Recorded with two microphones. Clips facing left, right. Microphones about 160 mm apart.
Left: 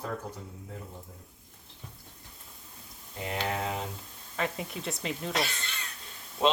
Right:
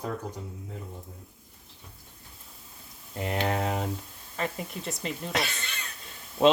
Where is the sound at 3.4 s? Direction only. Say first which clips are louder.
Right 4 dB; 55° right (ahead or behind).